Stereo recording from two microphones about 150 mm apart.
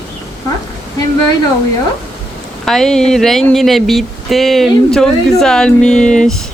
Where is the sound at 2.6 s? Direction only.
5° left (ahead or behind).